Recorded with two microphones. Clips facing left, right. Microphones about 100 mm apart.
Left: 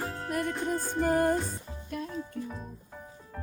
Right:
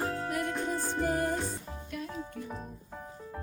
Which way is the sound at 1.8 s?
40° left (ahead or behind).